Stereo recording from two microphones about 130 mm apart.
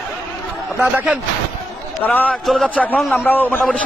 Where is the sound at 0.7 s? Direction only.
10° right (ahead or behind).